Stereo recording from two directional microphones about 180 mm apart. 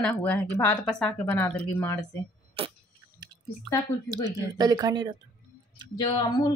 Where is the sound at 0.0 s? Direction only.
10° left (ahead or behind).